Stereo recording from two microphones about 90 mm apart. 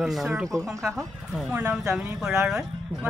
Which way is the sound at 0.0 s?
5° right (ahead or behind).